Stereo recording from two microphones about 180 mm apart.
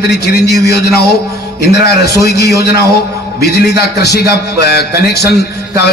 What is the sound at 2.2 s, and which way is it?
A man's voice, 65° left (ahead or behind).